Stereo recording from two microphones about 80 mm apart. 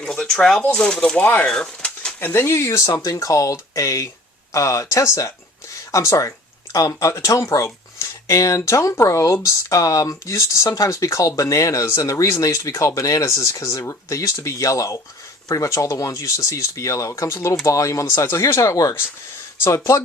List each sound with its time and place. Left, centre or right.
0.0 s speech: centre
2.2 s speech: left